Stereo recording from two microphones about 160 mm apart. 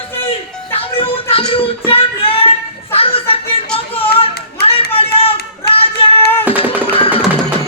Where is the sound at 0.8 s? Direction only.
35° left (ahead or behind).